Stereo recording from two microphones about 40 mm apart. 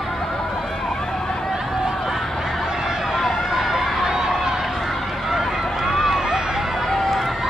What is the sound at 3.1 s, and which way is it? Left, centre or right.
Run, centre.